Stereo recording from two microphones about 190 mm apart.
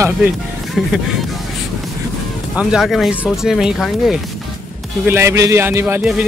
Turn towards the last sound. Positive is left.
turn(degrees=-10)  # may be behind; listen again after turning